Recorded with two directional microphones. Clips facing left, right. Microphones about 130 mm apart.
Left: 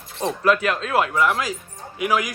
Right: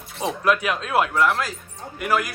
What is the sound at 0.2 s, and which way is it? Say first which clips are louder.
Speech: left 2 dB; 5° right (ahead or behind).